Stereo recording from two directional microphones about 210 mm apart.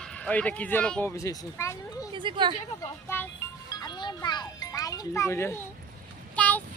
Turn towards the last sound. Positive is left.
turn(degrees=10)  # may be behind; listen again after turning